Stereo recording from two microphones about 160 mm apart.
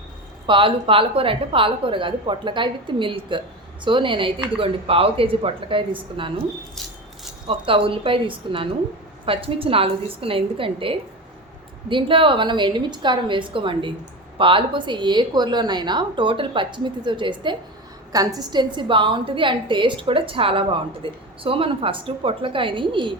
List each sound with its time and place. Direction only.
0.4 s a woman's voice: 30° right (ahead or behind)
7.4 s a woman's voice: 35° right (ahead or behind)